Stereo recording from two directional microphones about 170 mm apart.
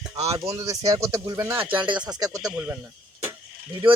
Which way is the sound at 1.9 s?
25° right (ahead or behind).